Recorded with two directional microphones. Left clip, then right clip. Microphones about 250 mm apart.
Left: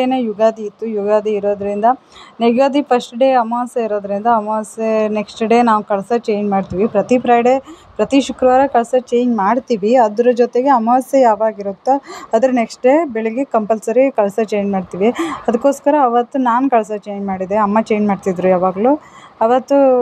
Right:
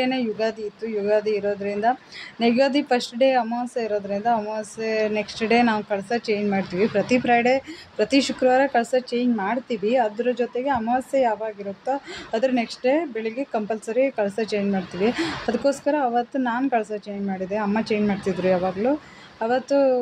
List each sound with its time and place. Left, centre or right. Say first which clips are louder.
0.0 s a woman's voice: left 9 dB; centre